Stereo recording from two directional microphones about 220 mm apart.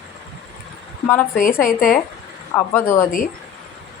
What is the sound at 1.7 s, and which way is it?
Speech, 40° left (ahead or behind).